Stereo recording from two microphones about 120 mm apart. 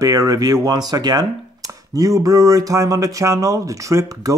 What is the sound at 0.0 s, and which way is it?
Speech, 30° right (ahead or behind).